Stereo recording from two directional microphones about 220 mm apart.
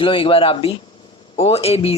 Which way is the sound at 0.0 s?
25° left (ahead or behind).